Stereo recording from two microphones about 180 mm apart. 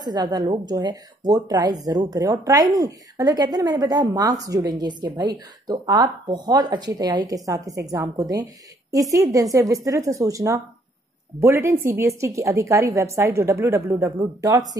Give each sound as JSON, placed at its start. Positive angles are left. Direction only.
{"t": 0.0, "sound": "a woman's voice", "side_deg": -25}